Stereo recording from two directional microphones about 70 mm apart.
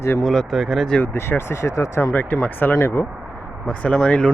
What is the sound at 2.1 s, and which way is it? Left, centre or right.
Speech, left.